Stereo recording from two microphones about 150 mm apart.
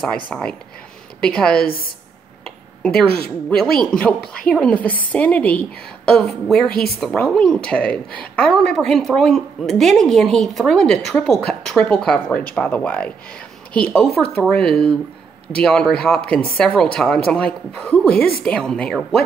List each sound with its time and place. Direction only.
0.0 s a woman's voice: 5° left (ahead or behind)
3.0 s a woman's voice: 5° left (ahead or behind)